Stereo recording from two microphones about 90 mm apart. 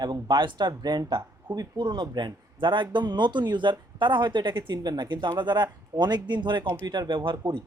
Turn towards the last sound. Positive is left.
turn(degrees=-60)  # may be behind; listen again after turning